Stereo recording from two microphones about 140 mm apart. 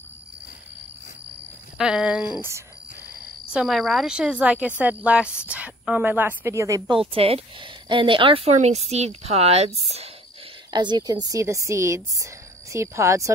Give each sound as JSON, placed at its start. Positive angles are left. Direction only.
{"t": 1.8, "sound": "speech", "side_deg": -5}
{"t": 3.5, "sound": "speech", "side_deg": 0}
{"t": 6.9, "sound": "speech", "side_deg": -40}
{"t": 10.7, "sound": "a woman's voice", "side_deg": -30}